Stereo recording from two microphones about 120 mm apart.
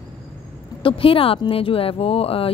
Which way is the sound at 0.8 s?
50° left (ahead or behind).